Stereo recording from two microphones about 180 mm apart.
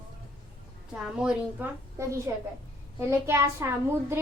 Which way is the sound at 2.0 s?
15° right (ahead or behind).